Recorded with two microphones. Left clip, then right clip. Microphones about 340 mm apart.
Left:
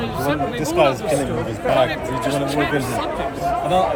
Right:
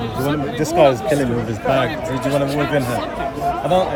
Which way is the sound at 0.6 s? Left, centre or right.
Right.